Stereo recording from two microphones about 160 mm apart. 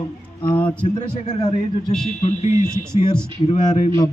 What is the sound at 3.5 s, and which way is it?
Speech, 45° left (ahead or behind).